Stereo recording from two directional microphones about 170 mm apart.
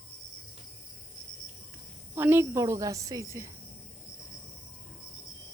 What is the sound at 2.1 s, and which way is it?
A woman's voice, 15° right (ahead or behind).